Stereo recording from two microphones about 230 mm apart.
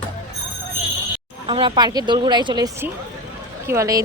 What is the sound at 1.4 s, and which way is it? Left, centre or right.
Speech, right.